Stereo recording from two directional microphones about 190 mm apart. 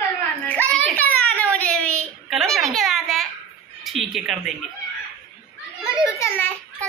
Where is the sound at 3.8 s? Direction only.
Centre (ahead or behind).